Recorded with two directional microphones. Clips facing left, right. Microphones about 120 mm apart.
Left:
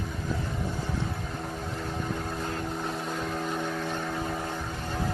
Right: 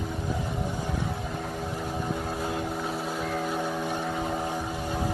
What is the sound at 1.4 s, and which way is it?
Vehicle, 10° right (ahead or behind).